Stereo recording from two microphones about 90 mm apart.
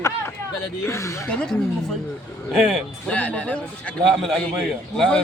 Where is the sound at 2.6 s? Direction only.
5° right (ahead or behind).